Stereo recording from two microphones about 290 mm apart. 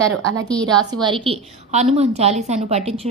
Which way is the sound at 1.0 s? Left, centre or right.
Centre.